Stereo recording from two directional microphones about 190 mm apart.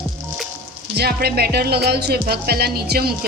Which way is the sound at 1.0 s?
55° right (ahead or behind).